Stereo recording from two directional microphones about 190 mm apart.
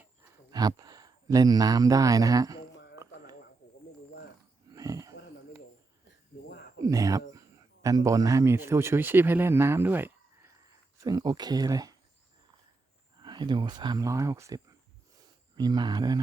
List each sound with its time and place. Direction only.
0.5 s speech: 20° right (ahead or behind)
2.7 s a sound: 65° left (ahead or behind)
4.7 s wheeze: 20° right (ahead or behind)
6.8 s speech: 20° right (ahead or behind)
13.1 s speech: 25° right (ahead or behind)